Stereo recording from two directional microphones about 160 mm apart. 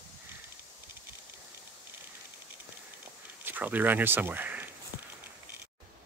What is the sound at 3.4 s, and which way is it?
Speech, 10° right (ahead or behind).